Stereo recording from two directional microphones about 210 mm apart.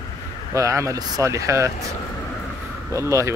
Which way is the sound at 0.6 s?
15° right (ahead or behind).